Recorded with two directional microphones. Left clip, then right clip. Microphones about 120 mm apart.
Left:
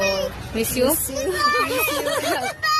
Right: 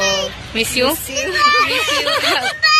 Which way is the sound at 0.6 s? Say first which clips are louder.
Right 4 dB; 15° right (ahead or behind).